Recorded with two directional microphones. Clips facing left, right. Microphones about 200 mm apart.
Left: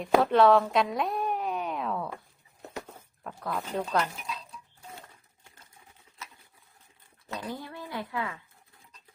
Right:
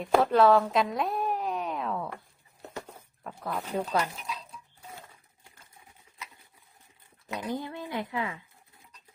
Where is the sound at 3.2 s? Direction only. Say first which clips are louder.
Even; 5° right (ahead or behind).